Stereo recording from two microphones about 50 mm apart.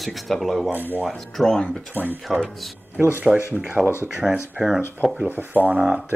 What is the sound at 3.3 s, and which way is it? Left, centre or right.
Speech, centre.